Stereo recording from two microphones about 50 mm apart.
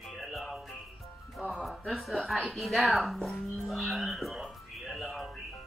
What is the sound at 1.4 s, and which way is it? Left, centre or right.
Speech, centre.